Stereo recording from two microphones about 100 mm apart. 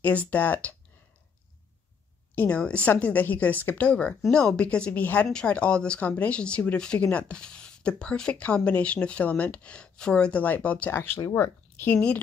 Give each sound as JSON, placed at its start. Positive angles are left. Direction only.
{"t": 0.0, "sound": "speech", "side_deg": 15}
{"t": 2.3, "sound": "speech", "side_deg": 15}